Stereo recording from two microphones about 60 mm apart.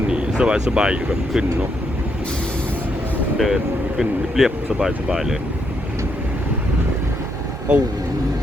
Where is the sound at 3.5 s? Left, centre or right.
Centre.